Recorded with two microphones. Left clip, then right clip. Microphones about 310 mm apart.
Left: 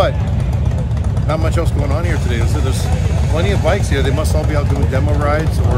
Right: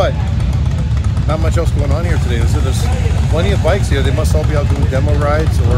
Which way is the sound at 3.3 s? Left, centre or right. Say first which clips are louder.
Right 1 dB; centre.